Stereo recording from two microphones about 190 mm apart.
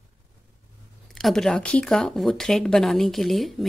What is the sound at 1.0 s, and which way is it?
Speech, centre (ahead or behind).